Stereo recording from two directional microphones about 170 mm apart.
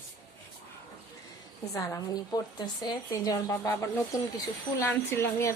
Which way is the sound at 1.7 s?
20° left (ahead or behind).